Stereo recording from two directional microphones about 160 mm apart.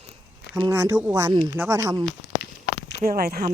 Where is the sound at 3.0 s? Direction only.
70° right (ahead or behind).